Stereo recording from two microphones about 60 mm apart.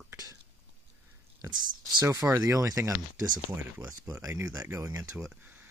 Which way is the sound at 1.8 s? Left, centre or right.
Right.